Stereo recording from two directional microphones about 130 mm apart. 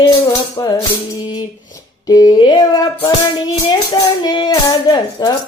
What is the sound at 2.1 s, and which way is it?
Music, 35° left (ahead or behind).